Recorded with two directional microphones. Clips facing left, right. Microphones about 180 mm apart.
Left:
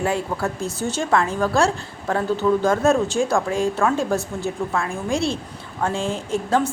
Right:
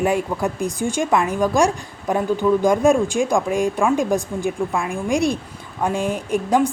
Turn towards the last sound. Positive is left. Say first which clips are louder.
# right 3 dB
turn(degrees=-15)  # may be behind; listen again after turning